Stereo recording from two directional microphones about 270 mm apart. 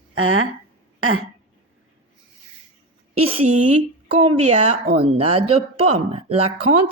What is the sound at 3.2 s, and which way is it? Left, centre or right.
Speech, right.